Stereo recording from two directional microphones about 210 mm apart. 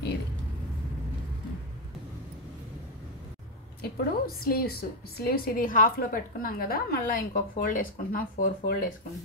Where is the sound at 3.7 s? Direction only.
45° left (ahead or behind).